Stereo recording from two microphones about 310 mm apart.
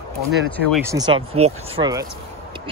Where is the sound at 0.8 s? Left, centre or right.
Centre.